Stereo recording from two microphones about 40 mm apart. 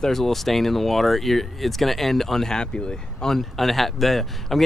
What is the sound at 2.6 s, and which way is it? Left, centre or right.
Speech, centre.